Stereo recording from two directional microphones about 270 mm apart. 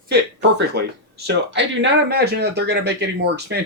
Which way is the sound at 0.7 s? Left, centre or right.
Right.